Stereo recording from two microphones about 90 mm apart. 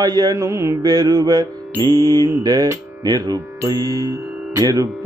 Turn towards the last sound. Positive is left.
turn(degrees=-40)  # may be behind; listen again after turning